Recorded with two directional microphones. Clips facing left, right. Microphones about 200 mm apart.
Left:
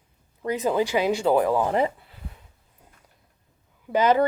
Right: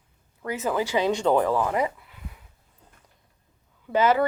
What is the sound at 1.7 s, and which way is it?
Speech, 30° left (ahead or behind).